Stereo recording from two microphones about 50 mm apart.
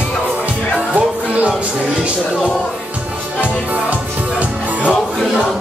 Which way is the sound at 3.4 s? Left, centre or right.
Right.